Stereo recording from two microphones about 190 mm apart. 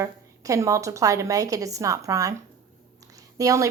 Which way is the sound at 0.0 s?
15° right (ahead or behind).